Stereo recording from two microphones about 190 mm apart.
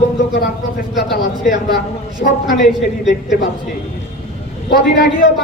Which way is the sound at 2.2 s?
45° left (ahead or behind).